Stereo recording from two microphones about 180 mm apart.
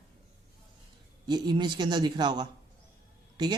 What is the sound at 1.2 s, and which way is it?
Speech, 25° right (ahead or behind).